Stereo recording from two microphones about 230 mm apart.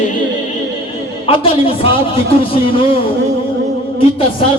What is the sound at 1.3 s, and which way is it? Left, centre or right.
Speech, left.